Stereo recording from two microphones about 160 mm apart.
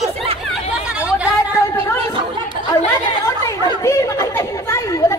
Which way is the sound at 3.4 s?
20° left (ahead or behind).